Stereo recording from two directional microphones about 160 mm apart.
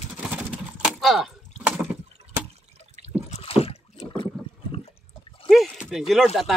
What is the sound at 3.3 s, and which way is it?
Rowboat, 40° left (ahead or behind).